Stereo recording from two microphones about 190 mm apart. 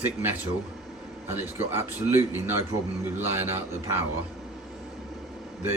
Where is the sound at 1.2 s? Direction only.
15° right (ahead or behind).